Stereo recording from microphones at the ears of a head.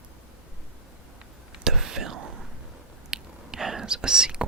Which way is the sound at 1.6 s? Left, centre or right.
Right.